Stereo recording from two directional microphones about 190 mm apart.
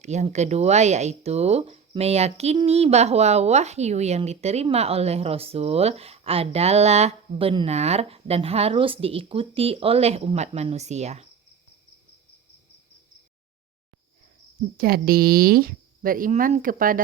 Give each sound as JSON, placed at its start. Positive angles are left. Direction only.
{"t": 0.0, "sound": "speech", "side_deg": -35}
{"t": 14.8, "sound": "speech", "side_deg": -50}